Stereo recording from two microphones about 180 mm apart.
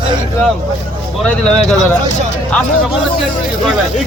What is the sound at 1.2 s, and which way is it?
Speech, 5° left (ahead or behind).